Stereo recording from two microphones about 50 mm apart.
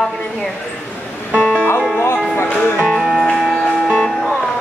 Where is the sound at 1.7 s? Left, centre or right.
Centre.